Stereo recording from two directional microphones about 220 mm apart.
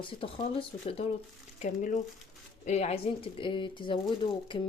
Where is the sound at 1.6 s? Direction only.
35° left (ahead or behind).